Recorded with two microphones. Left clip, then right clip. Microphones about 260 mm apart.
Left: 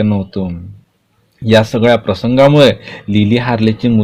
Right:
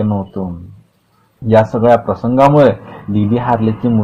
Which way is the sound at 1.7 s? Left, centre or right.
Left.